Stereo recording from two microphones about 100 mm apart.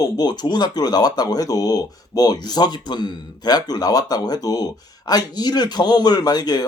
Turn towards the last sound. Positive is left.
turn(degrees=40)  # may be behind; listen again after turning